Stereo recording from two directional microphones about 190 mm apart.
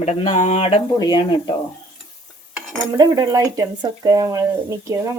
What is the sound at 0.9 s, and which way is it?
Speech, 20° left (ahead or behind).